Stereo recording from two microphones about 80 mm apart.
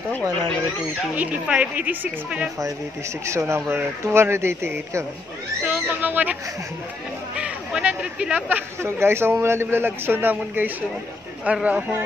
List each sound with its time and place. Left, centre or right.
1.1 s a woman's voice: centre
3.3 s speech: right
5.6 s speech: centre
7.3 s a sound: centre
8.8 s a man's voice: right; by 11.8 s centre